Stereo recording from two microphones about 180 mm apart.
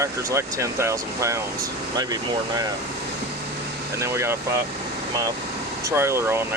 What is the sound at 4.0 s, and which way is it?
Speech, 15° right (ahead or behind).